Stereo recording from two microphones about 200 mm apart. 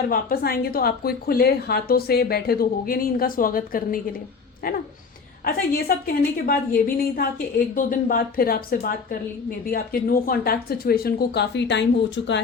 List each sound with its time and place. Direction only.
0.1 s a woman's voice: 45° left (ahead or behind); by 12.4 s 60° left (ahead or behind)